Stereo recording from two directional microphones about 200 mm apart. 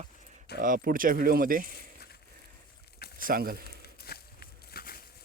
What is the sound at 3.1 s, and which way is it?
Speech, 45° right (ahead or behind).